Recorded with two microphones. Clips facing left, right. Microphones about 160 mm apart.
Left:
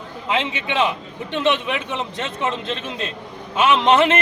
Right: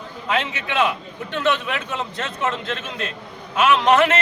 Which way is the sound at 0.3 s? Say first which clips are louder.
Left 1 dB; 25° left (ahead or behind).